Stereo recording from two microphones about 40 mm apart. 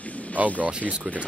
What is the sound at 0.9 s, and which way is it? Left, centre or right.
Speech, right.